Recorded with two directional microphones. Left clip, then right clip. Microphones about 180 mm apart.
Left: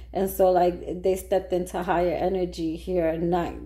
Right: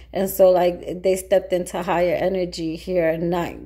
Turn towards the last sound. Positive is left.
turn(degrees=-25)  # may be behind; listen again after turning